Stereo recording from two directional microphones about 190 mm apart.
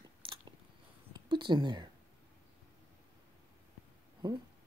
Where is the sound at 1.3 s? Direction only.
25° right (ahead or behind).